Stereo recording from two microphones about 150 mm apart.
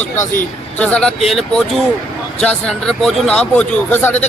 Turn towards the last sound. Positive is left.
turn(degrees=10)  # may be behind; listen again after turning